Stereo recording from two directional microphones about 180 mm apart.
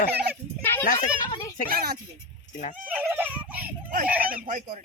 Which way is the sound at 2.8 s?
10° right (ahead or behind).